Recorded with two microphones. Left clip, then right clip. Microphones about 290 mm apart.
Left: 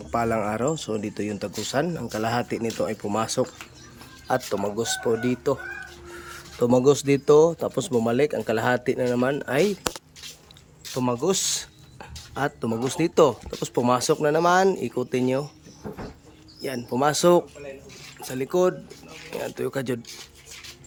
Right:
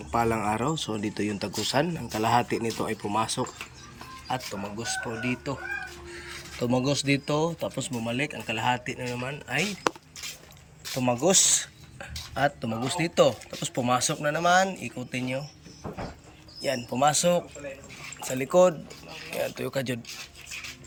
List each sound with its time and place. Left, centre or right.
0.1 s speech: centre
4.8 s speech: centre
10.9 s speech: centre
16.6 s speech: centre
18.3 s speech: centre